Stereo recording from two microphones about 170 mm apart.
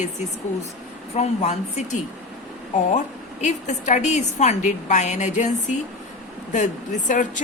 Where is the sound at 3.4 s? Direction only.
45° left (ahead or behind).